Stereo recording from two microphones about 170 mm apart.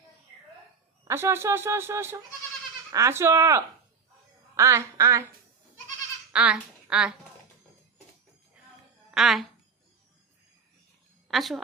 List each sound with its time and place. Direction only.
1.0 s speech: 15° right (ahead or behind)
6.3 s speech: 5° right (ahead or behind)
9.1 s speech: centre (ahead or behind)
11.3 s speech: centre (ahead or behind)